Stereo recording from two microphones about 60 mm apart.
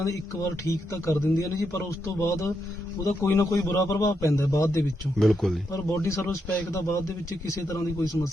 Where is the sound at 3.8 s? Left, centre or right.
Left.